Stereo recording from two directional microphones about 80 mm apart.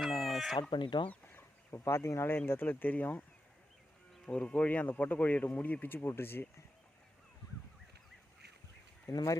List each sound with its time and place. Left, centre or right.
0.3 s chicken: centre
0.7 s speech: left
1.1 s chicken: left
1.7 s speech: left
4.3 s speech: centre
9.1 s speech: left